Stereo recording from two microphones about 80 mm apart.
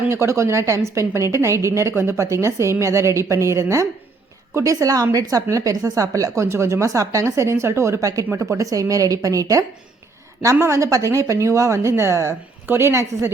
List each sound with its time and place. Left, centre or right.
0.1 s a woman's voice: right